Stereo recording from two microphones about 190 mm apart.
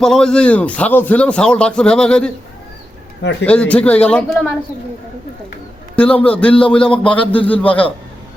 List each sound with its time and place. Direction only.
0.0 s speech: 5° left (ahead or behind)
3.4 s speech: 5° left (ahead or behind)
6.0 s speech: 10° left (ahead or behind)